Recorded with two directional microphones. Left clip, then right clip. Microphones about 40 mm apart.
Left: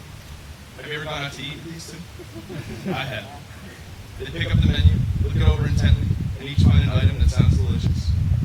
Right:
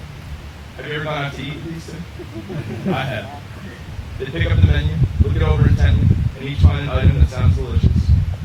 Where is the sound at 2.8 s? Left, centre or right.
Left.